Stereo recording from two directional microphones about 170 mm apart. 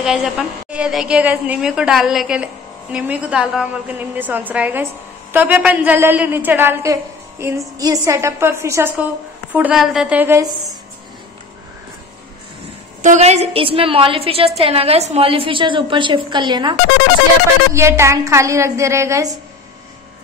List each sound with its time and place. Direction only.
0.0 s a woman's voice: 5° right (ahead or behind)
13.0 s a woman's voice: 45° right (ahead or behind); by 16.7 s 25° right (ahead or behind)
17.7 s a woman's voice: 15° right (ahead or behind)